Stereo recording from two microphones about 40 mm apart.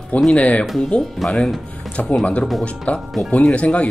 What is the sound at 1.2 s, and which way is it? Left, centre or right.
Speech, centre.